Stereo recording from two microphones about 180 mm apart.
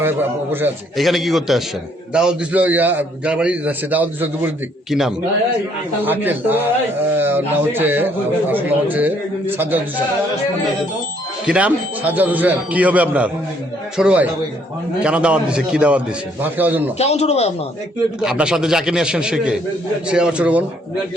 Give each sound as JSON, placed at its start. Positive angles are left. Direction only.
{"t": 0.0, "sound": "a man's voice", "side_deg": -10}
{"t": 0.9, "sound": "a man's voice", "side_deg": 0}
{"t": 11.4, "sound": "a man's voice", "side_deg": -5}
{"t": 17.0, "sound": "speech", "side_deg": 35}
{"t": 18.2, "sound": "a man's voice", "side_deg": -5}